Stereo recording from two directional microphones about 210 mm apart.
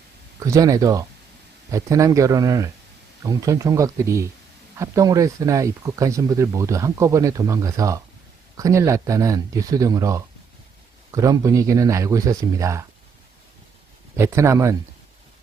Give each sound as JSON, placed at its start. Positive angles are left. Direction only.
{"t": 0.4, "sound": "speech", "side_deg": -15}
{"t": 14.2, "sound": "speech", "side_deg": -15}